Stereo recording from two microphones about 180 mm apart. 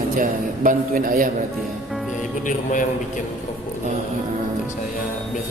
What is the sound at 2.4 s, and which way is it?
Speech, 45° left (ahead or behind).